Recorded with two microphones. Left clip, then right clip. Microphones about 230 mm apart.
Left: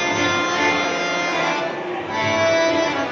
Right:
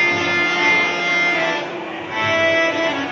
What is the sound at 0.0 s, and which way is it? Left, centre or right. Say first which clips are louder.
Music: right 3 dB; left.